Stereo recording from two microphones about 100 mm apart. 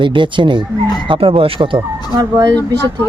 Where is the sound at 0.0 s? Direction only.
55° right (ahead or behind).